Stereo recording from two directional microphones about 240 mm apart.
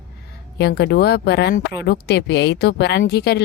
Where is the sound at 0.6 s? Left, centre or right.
Left.